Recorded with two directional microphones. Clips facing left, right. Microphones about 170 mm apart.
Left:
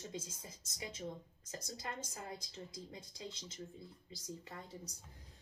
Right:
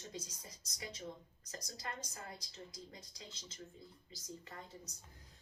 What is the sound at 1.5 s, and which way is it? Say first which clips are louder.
Speech: left 2 dB; 25° left (ahead or behind).